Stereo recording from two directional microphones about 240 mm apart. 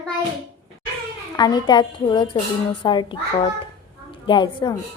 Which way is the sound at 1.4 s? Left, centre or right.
Centre.